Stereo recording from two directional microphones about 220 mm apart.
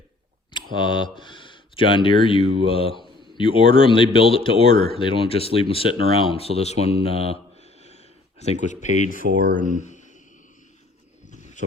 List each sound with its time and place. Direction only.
0.5 s speech: 20° left (ahead or behind); by 9.2 s 40° left (ahead or behind)
9.8 s a sound: 35° left (ahead or behind)
11.3 s wild animals: 35° left (ahead or behind)